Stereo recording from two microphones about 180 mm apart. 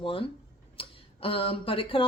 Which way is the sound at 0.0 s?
30° left (ahead or behind).